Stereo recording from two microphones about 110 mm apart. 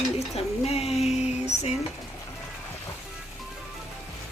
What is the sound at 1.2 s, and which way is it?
Music, 85° left.